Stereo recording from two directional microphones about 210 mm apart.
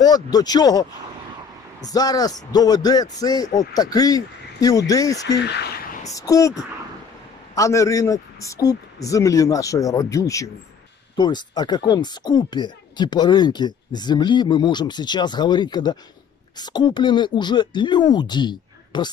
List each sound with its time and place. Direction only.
0.0 s a man's voice: 20° left (ahead or behind)